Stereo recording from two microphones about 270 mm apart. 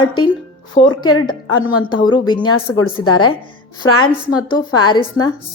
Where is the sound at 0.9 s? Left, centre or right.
Left.